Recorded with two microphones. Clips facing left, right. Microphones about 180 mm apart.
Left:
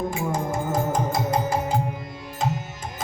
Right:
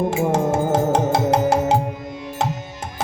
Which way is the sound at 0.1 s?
80° right.